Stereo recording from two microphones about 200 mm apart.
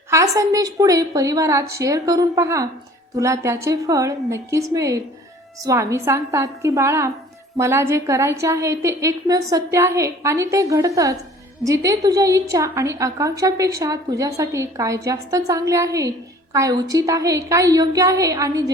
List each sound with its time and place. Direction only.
0.1 s a woman's voice: 15° right (ahead or behind)